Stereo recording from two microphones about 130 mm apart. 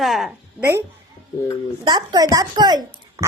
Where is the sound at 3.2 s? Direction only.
25° right (ahead or behind).